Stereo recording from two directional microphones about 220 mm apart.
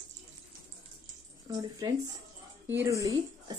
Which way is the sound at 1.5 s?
15° right (ahead or behind).